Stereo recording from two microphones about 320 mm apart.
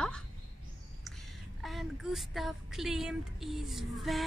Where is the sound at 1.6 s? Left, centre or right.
Centre.